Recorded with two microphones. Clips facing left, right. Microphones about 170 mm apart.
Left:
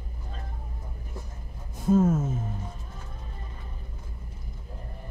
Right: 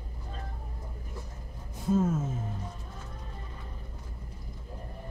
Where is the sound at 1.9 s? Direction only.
50° left (ahead or behind).